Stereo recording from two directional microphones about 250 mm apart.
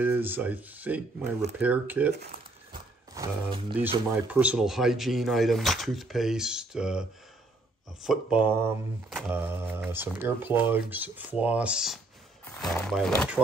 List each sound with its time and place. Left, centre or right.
0.0 s speech: centre
3.2 s speech: centre
4.3 s speech: centre